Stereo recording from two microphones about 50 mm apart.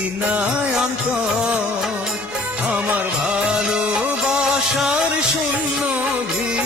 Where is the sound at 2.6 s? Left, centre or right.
Right.